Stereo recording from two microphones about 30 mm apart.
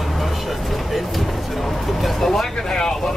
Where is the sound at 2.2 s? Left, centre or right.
Centre.